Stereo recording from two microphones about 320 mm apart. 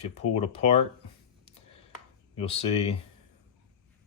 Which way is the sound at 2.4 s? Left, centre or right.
Centre.